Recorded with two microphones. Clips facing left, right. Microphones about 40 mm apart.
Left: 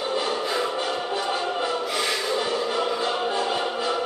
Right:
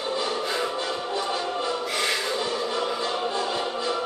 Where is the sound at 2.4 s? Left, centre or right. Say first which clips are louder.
Left 2 dB; left.